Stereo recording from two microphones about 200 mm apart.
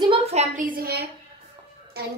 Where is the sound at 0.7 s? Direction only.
50° right (ahead or behind).